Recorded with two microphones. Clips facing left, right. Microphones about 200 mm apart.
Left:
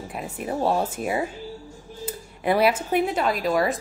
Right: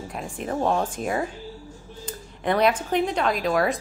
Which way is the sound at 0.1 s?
5° left (ahead or behind).